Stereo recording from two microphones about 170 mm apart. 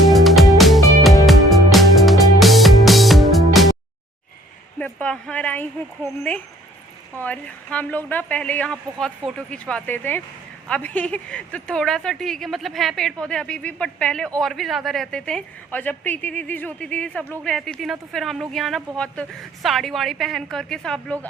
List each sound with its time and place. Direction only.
0.1 s music: centre (ahead or behind)
4.8 s a sound: 10° left (ahead or behind)
7.2 s a woman's voice: 10° left (ahead or behind)